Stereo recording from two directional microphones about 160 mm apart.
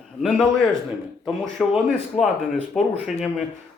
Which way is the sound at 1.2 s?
Centre (ahead or behind).